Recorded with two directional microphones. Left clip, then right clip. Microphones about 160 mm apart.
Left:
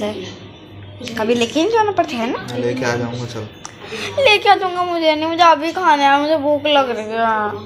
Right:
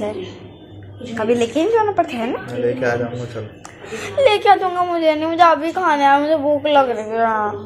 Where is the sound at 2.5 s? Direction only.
45° left (ahead or behind).